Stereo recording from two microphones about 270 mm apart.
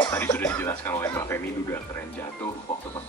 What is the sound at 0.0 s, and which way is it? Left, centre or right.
Speech, centre.